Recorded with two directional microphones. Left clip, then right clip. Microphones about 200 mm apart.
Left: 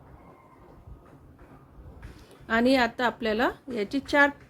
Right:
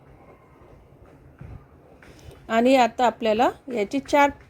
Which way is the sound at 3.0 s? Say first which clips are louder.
Right 6 dB; centre (ahead or behind).